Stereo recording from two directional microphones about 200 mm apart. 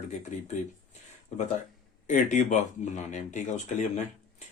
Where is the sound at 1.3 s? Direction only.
35° left (ahead or behind).